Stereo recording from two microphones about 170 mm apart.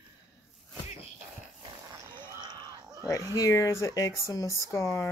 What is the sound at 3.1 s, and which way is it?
Speech, 20° left (ahead or behind).